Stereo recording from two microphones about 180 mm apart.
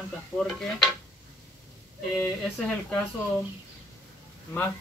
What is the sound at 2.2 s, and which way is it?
Speech, 5° left (ahead or behind).